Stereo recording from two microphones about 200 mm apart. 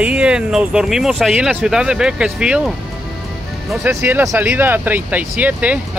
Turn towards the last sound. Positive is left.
turn(degrees=-5)  # may be behind; listen again after turning